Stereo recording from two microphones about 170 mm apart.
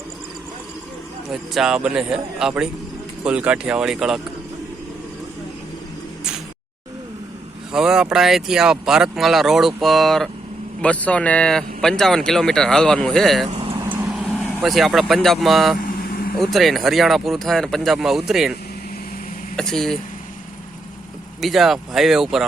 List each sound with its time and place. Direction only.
1.3 s speech: centre (ahead or behind)
7.7 s speech: 5° right (ahead or behind)
13.5 s vehicle: 35° right (ahead or behind)
13.9 s speech: 5° right (ahead or behind)
15.8 s vehicle: 55° left (ahead or behind)
16.4 s speech: centre (ahead or behind)
19.5 s speech: 5° left (ahead or behind)
21.4 s speech: centre (ahead or behind)